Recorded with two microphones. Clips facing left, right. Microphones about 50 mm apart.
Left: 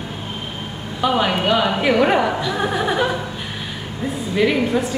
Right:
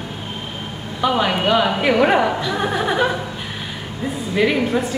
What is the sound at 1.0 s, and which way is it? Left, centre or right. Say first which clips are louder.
Speech: even; centre.